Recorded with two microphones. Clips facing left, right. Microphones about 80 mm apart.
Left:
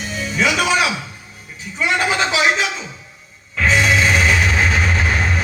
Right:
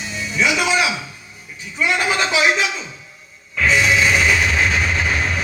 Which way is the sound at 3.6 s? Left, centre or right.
Left.